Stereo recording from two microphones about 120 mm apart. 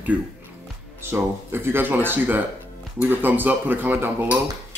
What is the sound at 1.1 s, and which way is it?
Speech, 20° right (ahead or behind).